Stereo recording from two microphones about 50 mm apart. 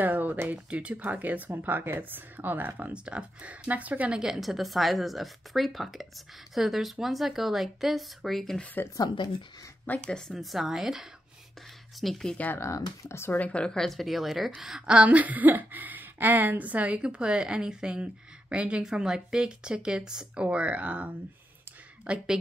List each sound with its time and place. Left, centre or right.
0.0 s speech: right
0.7 s speech: right
2.9 s speech: right
4.1 s speech: centre
10.0 s speech: centre
10.3 s speech: centre
12.5 s speech: left
13.3 s speech: left
13.7 s speech: centre
15.0 s a woman's voice: right
18.9 s speech: centre
20.3 s a woman's voice: right